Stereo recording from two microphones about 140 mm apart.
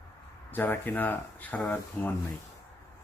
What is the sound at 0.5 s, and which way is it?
Speech, 15° left (ahead or behind).